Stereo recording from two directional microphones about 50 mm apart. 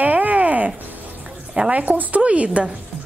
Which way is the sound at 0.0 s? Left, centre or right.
Right.